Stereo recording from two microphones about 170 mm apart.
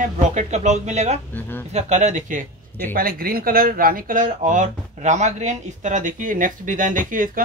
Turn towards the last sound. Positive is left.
turn(degrees=-50)  # may be behind; listen again after turning